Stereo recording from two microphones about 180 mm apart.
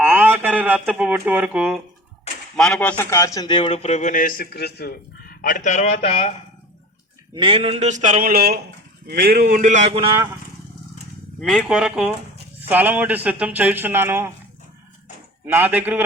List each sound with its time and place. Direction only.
0.0 s a sound: 10° right (ahead or behind)
2.6 s speech: 5° left (ahead or behind)
3.0 s a man's voice: 15° left (ahead or behind); by 6.3 s 35° left (ahead or behind)
7.3 s speech: 30° right (ahead or behind)
11.3 s speech: centre (ahead or behind); by 14.3 s 15° right (ahead or behind)
15.4 s speech: 10° right (ahead or behind)